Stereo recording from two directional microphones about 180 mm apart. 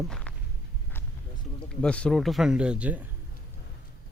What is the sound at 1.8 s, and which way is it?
Speech, 5° left (ahead or behind).